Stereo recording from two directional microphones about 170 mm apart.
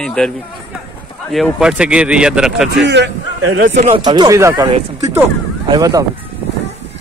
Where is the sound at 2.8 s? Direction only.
90° right.